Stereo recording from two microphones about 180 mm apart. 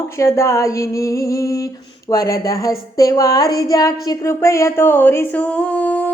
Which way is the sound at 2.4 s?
20° left (ahead or behind).